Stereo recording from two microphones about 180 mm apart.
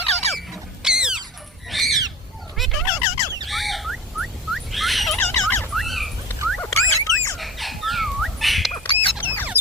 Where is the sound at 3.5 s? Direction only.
Centre (ahead or behind).